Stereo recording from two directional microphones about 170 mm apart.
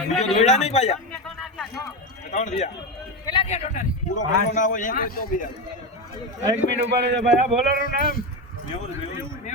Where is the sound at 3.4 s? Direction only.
40° left (ahead or behind); by 5.3 s 60° left (ahead or behind).